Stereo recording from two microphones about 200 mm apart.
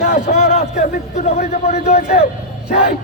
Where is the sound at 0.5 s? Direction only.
35° left (ahead or behind).